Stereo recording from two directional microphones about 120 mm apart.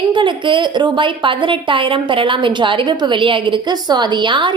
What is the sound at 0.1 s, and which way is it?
A woman's voice, 40° right (ahead or behind).